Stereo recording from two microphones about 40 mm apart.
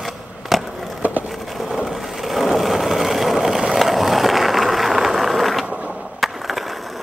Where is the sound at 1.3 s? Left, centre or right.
Centre.